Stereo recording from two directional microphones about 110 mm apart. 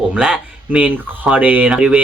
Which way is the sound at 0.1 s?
10° right (ahead or behind).